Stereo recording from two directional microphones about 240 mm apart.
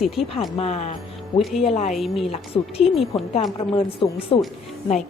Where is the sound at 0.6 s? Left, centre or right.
Left.